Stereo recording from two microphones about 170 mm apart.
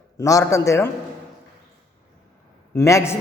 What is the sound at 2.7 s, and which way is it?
Speech, 15° left (ahead or behind).